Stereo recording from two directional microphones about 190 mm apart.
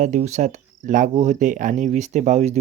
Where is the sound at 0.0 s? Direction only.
40° right (ahead or behind).